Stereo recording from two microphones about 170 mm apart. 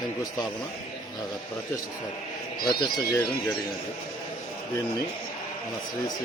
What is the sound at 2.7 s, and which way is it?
Speech, 20° left (ahead or behind).